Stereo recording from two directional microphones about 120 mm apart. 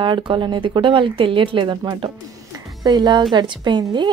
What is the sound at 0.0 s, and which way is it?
A woman's voice, 45° right (ahead or behind).